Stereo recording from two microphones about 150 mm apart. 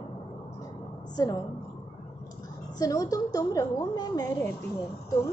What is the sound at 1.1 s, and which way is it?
Speech, 25° left (ahead or behind).